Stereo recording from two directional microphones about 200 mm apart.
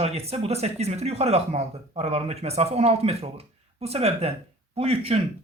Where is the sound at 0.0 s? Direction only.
30° right (ahead or behind).